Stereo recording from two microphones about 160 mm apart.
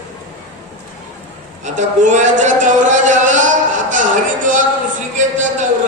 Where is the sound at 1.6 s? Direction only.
50° right (ahead or behind).